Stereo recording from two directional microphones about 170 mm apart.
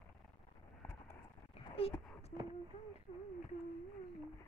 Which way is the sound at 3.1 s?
40° left (ahead or behind).